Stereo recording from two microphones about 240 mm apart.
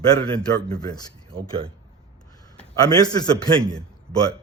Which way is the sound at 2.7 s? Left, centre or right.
Centre.